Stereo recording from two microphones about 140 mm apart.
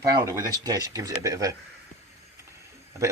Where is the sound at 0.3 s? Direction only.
25° right (ahead or behind).